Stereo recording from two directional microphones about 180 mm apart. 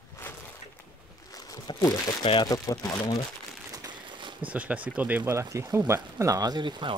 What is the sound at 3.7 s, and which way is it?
Crumpling, 25° right (ahead or behind).